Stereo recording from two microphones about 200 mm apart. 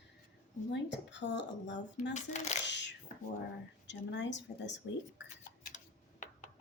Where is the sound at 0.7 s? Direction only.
60° left (ahead or behind).